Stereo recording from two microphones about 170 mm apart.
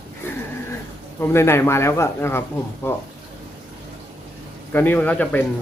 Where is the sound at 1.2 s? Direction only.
15° left (ahead or behind).